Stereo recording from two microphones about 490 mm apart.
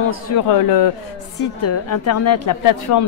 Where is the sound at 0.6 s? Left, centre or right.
Left.